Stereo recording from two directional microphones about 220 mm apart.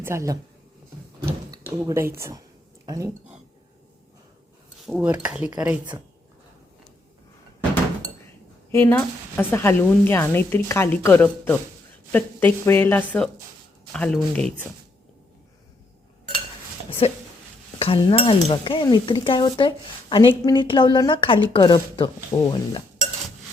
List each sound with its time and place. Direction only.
0.0 s speech: 15° right (ahead or behind)
1.9 s speech: 10° right (ahead or behind)
4.9 s speech: 5° right (ahead or behind)
8.7 s speech: 10° left (ahead or behind)
17.0 s speech: 25° left (ahead or behind)